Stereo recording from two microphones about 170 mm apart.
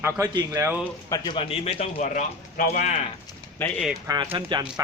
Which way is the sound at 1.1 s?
25° left (ahead or behind).